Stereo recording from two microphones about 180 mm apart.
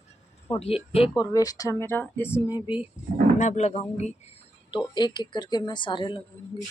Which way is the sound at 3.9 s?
35° left (ahead or behind).